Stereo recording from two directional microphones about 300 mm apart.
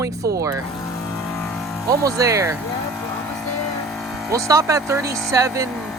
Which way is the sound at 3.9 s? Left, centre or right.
Centre.